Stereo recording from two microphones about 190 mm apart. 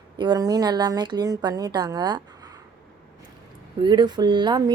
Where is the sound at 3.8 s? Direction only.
25° right (ahead or behind).